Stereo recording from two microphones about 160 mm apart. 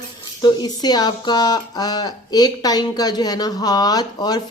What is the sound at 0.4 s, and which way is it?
Speech, 25° left (ahead or behind).